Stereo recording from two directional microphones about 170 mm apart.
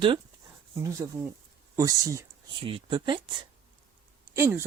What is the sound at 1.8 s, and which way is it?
Speech, 20° right (ahead or behind).